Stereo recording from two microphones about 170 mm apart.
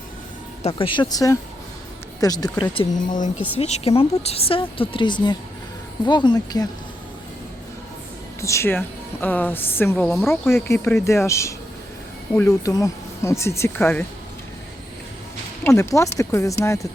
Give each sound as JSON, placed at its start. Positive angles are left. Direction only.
{"t": 0.6, "sound": "speech", "side_deg": 30}
{"t": 3.6, "sound": "speech", "side_deg": 35}
{"t": 8.4, "sound": "speech", "side_deg": 15}
{"t": 12.3, "sound": "speech", "side_deg": 5}
{"t": 12.6, "sound": "speech", "side_deg": 20}
{"t": 15.6, "sound": "speech", "side_deg": 15}